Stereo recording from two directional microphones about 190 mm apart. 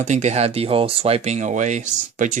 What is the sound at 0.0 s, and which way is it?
Speech, 40° right (ahead or behind).